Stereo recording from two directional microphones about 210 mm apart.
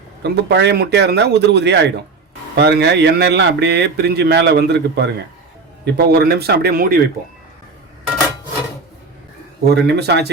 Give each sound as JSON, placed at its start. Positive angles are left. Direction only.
{"t": 0.2, "sound": "speech", "side_deg": -55}
{"t": 9.6, "sound": "speech", "side_deg": -50}